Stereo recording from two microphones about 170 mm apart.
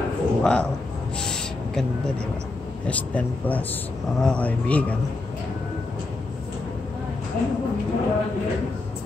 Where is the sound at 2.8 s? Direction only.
10° left (ahead or behind).